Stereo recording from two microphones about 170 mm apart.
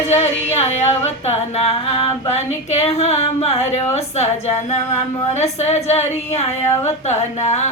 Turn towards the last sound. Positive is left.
turn(degrees=40)  # may be behind; listen again after turning